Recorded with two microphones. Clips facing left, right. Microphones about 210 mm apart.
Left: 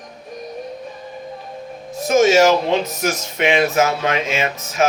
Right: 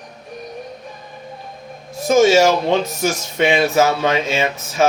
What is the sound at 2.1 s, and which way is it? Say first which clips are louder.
Speech: right 1 dB; 30° right (ahead or behind).